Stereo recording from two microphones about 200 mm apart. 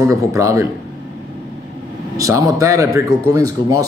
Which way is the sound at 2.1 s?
15° right (ahead or behind).